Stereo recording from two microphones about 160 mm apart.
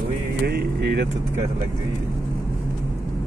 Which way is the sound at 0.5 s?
85° right.